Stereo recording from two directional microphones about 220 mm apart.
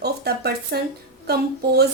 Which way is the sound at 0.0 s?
45° right (ahead or behind).